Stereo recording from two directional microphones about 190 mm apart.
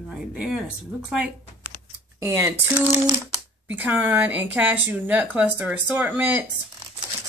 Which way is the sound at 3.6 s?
10° right (ahead or behind).